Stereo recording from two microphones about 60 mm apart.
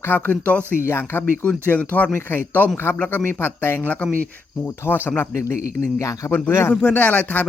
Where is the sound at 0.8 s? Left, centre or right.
Left.